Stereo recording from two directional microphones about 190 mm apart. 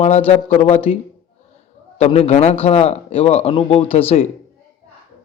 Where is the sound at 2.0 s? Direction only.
30° left (ahead or behind).